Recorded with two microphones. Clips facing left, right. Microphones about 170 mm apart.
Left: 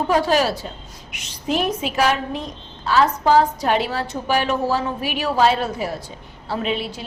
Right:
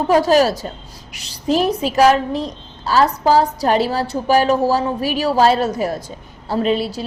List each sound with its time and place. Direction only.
0.1 s a woman's voice: 40° right (ahead or behind)